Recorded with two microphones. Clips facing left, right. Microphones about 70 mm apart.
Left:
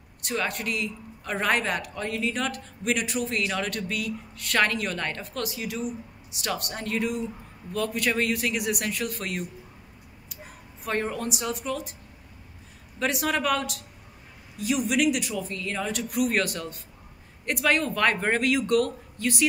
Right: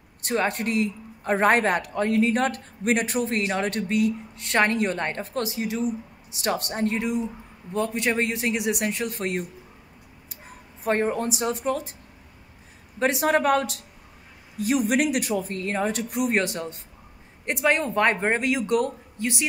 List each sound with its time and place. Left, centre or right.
0.2 s speech: right
7.0 s speech: centre; by 11.9 s right
13.0 s speech: right